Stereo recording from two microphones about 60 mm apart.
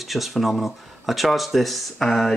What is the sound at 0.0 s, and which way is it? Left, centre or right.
Speech, centre.